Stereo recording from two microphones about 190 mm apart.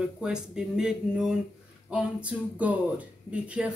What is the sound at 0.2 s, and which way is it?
Speech, 5° right (ahead or behind).